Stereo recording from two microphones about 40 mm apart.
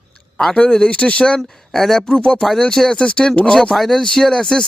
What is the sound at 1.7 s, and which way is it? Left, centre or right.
Speech, centre.